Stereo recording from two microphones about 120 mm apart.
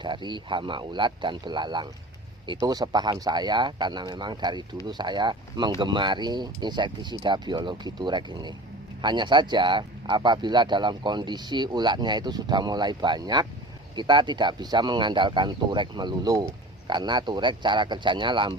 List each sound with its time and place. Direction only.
0.0 s speech: 40° right (ahead or behind)